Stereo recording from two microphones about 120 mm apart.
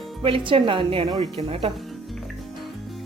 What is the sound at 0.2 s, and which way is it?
Speech, 45° right (ahead or behind).